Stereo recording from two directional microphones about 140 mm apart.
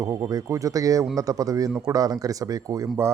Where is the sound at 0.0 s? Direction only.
25° right (ahead or behind).